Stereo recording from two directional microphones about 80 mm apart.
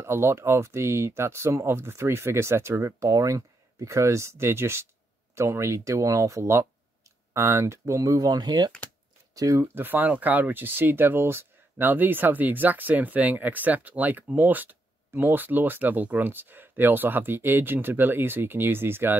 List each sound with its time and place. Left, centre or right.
0.0 s speech: right
9.3 s speech: right
9.6 s speech: right